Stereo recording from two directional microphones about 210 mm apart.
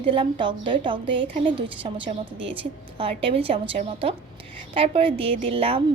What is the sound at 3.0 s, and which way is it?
A woman's voice, 25° right (ahead or behind).